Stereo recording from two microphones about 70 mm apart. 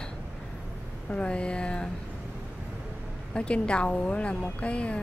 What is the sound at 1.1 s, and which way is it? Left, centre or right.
Speech, centre.